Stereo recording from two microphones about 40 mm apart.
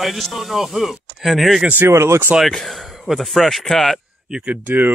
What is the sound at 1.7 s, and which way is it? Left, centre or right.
Speech, right.